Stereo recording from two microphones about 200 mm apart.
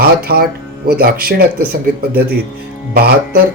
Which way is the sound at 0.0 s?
50° right (ahead or behind).